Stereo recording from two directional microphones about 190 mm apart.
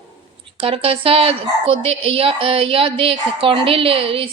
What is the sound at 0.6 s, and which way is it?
Speech, 30° right (ahead or behind).